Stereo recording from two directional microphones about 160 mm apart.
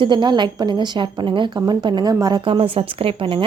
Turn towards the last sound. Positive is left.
turn(degrees=-35)  # may be behind; listen again after turning